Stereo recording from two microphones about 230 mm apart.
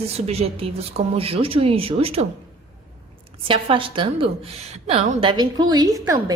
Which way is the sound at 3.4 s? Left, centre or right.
Right.